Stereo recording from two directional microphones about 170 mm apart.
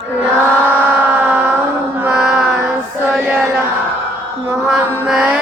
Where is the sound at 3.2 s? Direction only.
10° right (ahead or behind).